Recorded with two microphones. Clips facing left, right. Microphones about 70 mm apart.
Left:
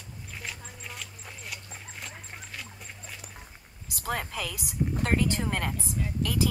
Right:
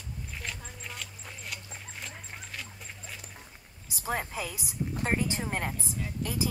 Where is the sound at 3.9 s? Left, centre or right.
Left.